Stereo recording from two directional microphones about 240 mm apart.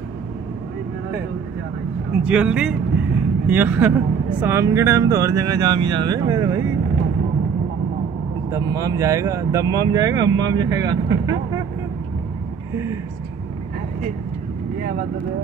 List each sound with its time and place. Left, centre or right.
2.2 s speech: centre
8.5 s speech: centre